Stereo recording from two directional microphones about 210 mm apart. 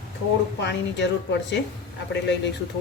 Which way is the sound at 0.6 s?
55° left (ahead or behind).